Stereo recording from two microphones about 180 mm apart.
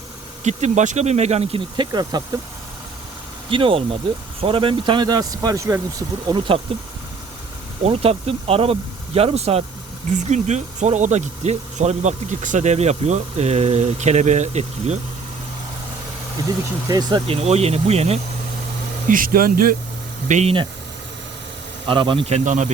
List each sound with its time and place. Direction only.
0.4 s speech: 40° right (ahead or behind); by 2.4 s 20° right (ahead or behind)
3.5 s speech: 30° right (ahead or behind)
16.9 s speech: 20° right (ahead or behind)
17.2 s speech: 35° right (ahead or behind)
19.0 s speech: 50° right (ahead or behind)
20.2 s speech: 40° right (ahead or behind)
21.8 s speech: 30° right (ahead or behind)